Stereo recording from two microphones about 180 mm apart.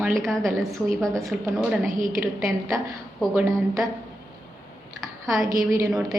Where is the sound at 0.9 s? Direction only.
5° left (ahead or behind).